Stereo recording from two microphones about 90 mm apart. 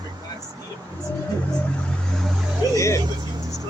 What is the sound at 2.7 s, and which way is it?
Speech, 30° left (ahead or behind).